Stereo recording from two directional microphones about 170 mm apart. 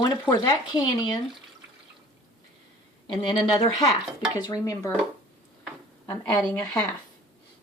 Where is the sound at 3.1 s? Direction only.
30° left (ahead or behind).